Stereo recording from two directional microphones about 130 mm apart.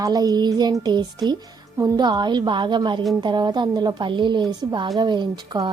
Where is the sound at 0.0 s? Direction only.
30° right (ahead or behind).